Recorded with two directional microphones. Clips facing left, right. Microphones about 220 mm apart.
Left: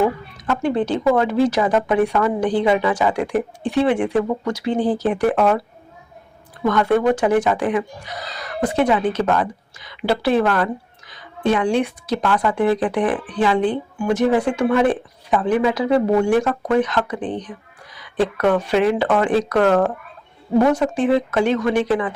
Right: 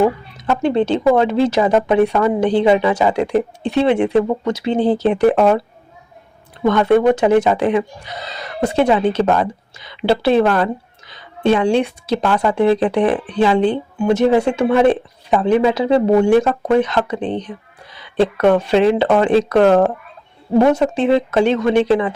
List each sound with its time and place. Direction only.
0.3 s a woman's voice: 25° right (ahead or behind)
6.7 s a woman's voice: 25° right (ahead or behind)